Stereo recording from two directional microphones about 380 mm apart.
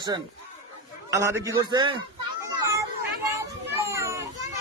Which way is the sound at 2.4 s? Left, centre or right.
Centre.